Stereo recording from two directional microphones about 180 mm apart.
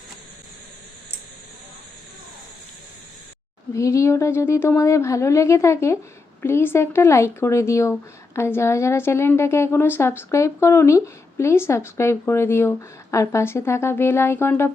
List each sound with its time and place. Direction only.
3.8 s a woman's voice: 15° left (ahead or behind)